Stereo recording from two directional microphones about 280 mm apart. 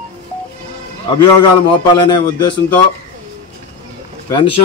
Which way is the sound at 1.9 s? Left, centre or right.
Centre.